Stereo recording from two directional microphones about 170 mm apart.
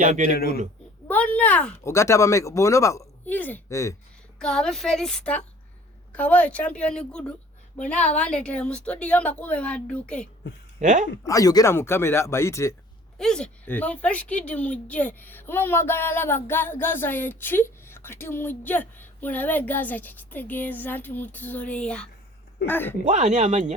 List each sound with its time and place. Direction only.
0.0 s speech: 45° right (ahead or behind)
0.3 s speech: 65° left (ahead or behind)
1.0 s speech: 10° left (ahead or behind)
4.4 s speech: 5° left (ahead or behind)
10.8 s speech: 45° right (ahead or behind)
11.2 s speech: 20° left (ahead or behind)
13.1 s speech: 5° left (ahead or behind)
23.0 s speech: 45° right (ahead or behind)